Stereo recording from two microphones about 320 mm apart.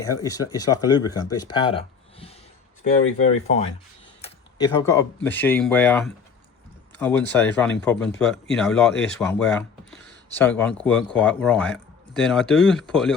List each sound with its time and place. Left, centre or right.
0.0 s speech: centre
1.5 s a sound: centre
3.2 s speech: centre